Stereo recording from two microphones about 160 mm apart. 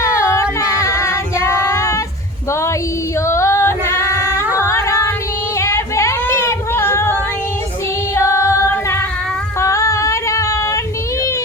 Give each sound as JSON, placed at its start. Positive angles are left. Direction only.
{"t": 0.0, "sound": "singing", "side_deg": 20}
{"t": 0.8, "sound": "female singing", "side_deg": 20}
{"t": 4.5, "sound": "singing", "side_deg": 15}
{"t": 5.5, "sound": "a sound", "side_deg": 20}
{"t": 8.1, "sound": "music", "side_deg": 15}
{"t": 9.6, "sound": "female singing", "side_deg": 20}